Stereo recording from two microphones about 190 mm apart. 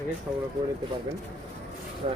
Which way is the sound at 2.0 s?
35° right (ahead or behind).